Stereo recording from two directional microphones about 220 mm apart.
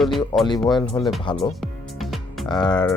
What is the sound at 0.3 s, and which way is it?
Speech, 15° left (ahead or behind).